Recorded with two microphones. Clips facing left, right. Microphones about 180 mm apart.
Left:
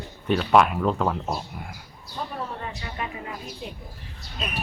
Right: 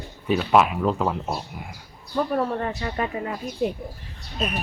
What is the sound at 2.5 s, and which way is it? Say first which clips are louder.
Speech: right 7 dB; 50° right (ahead or behind).